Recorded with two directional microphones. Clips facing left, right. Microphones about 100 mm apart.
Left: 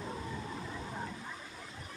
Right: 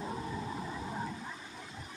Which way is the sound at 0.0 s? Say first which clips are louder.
Right 3 dB; 10° right (ahead or behind).